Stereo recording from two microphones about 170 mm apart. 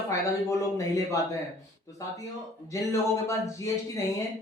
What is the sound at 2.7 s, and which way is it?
Speech, 20° left (ahead or behind).